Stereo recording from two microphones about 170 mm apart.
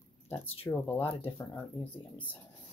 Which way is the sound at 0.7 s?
15° left (ahead or behind).